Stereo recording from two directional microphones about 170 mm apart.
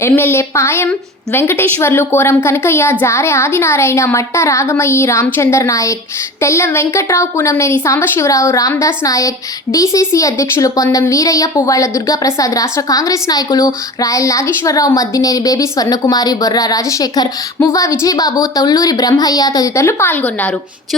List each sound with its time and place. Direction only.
0.0 s a woman's voice: 15° left (ahead or behind)